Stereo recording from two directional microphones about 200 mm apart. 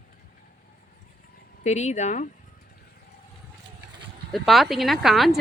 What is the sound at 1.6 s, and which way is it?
Speech, 35° left (ahead or behind).